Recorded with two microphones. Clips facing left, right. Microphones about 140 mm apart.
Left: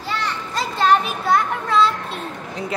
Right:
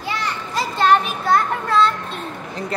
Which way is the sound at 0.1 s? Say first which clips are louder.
Even; 10° right (ahead or behind).